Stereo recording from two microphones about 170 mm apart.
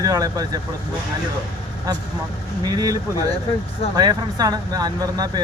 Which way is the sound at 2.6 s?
20° right (ahead or behind).